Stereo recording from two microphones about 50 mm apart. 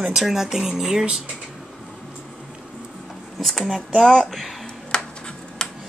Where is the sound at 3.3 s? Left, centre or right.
Centre.